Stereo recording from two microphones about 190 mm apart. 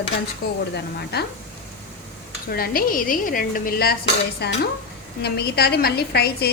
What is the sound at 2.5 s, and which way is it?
A woman's voice, 50° left (ahead or behind).